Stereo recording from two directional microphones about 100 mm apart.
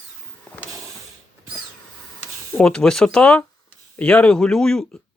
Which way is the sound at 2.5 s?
10° left (ahead or behind).